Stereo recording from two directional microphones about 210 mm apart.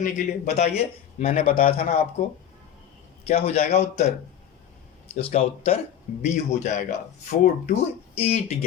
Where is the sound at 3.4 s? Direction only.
30° left (ahead or behind).